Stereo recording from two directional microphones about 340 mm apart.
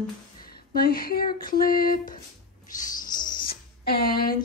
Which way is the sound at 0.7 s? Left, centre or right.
Left.